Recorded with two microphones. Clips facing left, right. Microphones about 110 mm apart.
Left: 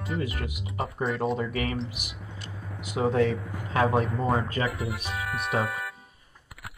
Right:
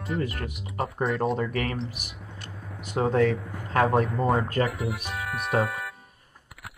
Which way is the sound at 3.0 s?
50° right (ahead or behind).